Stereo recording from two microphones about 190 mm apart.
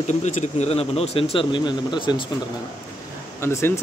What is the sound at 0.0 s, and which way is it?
Speech, 40° left (ahead or behind).